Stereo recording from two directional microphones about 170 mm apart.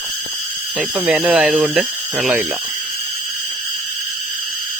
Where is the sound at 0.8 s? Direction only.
10° right (ahead or behind).